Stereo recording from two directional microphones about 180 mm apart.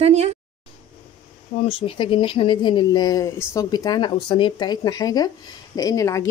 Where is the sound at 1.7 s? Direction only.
30° left (ahead or behind).